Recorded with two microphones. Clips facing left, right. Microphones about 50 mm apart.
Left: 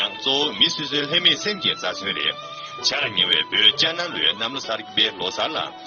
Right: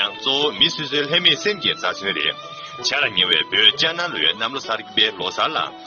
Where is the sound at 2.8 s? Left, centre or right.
Right.